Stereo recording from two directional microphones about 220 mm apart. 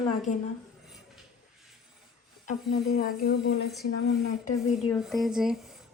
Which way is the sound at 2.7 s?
40° left (ahead or behind).